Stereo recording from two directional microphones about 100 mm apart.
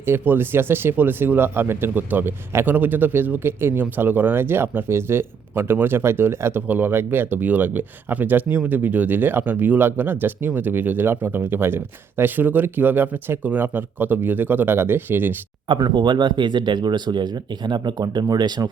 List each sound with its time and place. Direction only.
0.0 s speech: 25° right (ahead or behind)
15.8 s speech: 50° right (ahead or behind)